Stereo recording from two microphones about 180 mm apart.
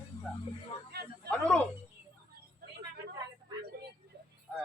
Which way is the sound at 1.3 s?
5° left (ahead or behind).